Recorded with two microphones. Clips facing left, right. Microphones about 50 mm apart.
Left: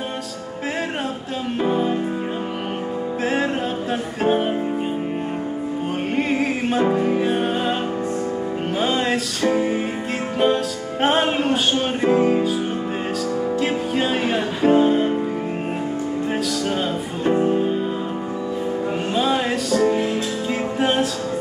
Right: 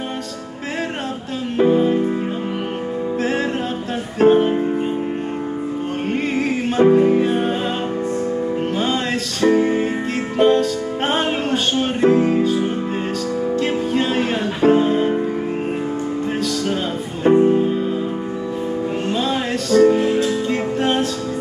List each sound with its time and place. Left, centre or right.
1.6 s music: centre
3.2 s music: centre
6.1 s music: centre
8.7 s music: centre
13.6 s music: centre
17.3 s music: right
19.0 s music: centre